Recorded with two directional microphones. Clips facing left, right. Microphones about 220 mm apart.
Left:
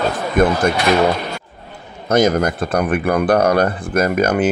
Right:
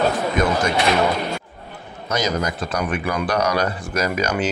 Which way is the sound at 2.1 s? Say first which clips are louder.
Left 8 dB; 55° left (ahead or behind).